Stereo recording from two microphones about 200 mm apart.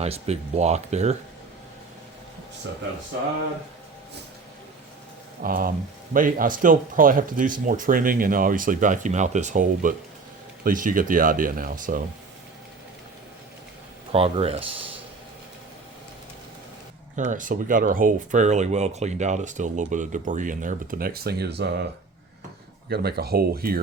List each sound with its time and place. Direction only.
0.0 s speech: 30° right (ahead or behind)
5.4 s speech: 45° right (ahead or behind)
14.1 s speech: 30° right (ahead or behind)
17.2 s speech: 40° right (ahead or behind); by 21.8 s 60° right (ahead or behind)
22.9 s speech: 50° right (ahead or behind)